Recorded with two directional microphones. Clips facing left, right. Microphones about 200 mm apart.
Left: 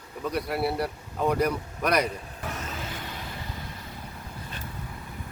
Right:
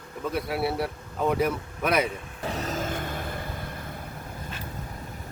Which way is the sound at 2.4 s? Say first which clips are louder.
Right 6 dB; 35° right (ahead or behind).